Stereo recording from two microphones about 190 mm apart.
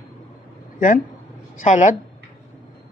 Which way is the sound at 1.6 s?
40° left (ahead or behind).